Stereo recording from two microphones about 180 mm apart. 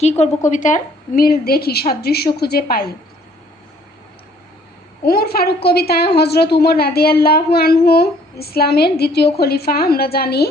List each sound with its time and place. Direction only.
0.0 s a woman's voice: 40° left (ahead or behind); by 2.9 s 55° left (ahead or behind)
5.0 s a woman's voice: 60° left (ahead or behind)